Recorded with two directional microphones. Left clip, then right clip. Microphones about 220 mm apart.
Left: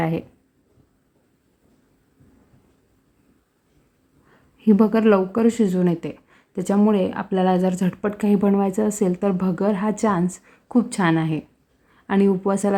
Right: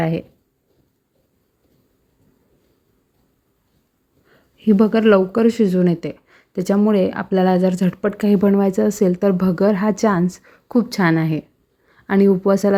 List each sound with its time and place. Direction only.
0.0 s speech: 10° right (ahead or behind)
4.3 s speech: 10° right (ahead or behind)